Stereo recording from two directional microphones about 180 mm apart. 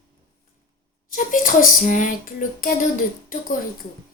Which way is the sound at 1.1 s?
45° left (ahead or behind).